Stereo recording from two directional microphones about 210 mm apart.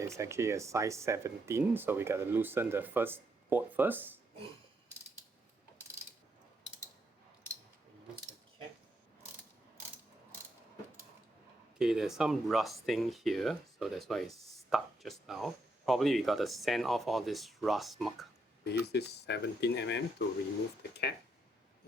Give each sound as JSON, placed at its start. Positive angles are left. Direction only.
{"t": 0.0, "sound": "speech", "side_deg": -15}
{"t": 11.8, "sound": "speech", "side_deg": -5}
{"t": 18.6, "sound": "speech", "side_deg": 50}